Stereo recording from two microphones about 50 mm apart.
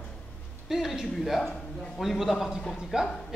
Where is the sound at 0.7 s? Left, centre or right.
Centre.